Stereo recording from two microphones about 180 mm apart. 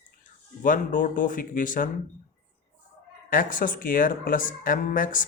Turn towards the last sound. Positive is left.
turn(degrees=50)  # may be behind; listen again after turning